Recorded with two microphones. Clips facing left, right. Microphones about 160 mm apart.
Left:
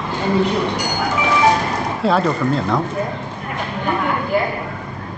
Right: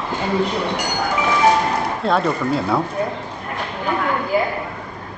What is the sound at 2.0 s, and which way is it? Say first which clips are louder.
Speech: left 3 dB; centre (ahead or behind).